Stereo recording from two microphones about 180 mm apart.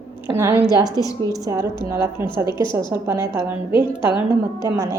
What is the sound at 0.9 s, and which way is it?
Speech, 20° left (ahead or behind).